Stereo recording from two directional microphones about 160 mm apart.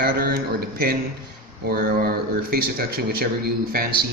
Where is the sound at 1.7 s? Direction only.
70° right (ahead or behind).